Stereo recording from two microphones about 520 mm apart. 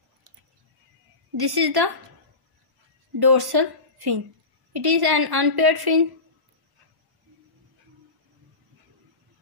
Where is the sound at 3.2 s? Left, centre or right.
Right.